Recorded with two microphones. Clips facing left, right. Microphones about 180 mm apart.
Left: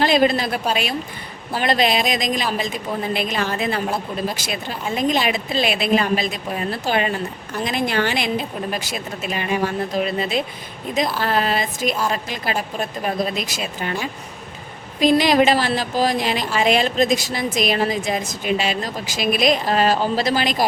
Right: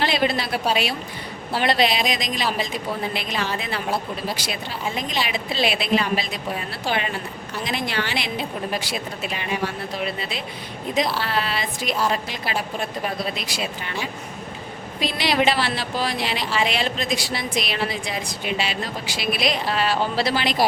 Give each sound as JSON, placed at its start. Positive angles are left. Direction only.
{"t": 0.0, "sound": "speech", "side_deg": 45}
{"t": 4.9, "sound": "speech", "side_deg": 50}
{"t": 15.0, "sound": "speech", "side_deg": 45}